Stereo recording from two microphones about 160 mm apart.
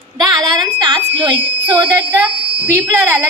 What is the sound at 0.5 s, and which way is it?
Speech, 30° right (ahead or behind).